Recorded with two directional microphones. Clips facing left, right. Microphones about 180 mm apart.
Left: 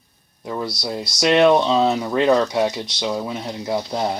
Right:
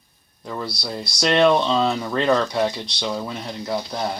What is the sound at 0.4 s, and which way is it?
Speech, 10° left (ahead or behind).